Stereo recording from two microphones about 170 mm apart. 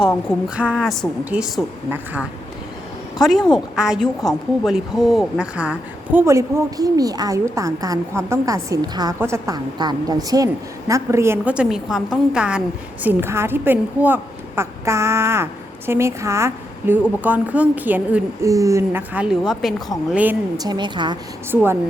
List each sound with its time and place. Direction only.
0.4 s a woman's voice: 5° right (ahead or behind)
3.8 s a woman's voice: 5° right (ahead or behind)
20.6 s a woman's voice: 25° right (ahead or behind)
21.5 s speech: 10° right (ahead or behind)